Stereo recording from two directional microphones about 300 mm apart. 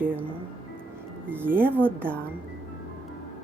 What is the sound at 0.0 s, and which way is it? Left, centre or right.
Speech, centre.